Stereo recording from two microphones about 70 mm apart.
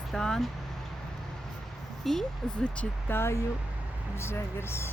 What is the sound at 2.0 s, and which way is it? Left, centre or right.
Speech, centre.